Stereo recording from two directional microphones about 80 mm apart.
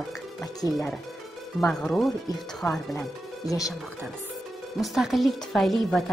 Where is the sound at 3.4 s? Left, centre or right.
Left.